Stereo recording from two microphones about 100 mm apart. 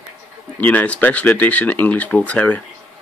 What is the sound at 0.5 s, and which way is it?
Speech, 15° left (ahead or behind).